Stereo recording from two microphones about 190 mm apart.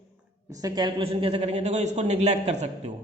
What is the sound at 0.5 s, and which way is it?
Speech, 20° right (ahead or behind).